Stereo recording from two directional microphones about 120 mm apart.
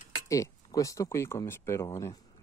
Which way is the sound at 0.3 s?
25° left (ahead or behind).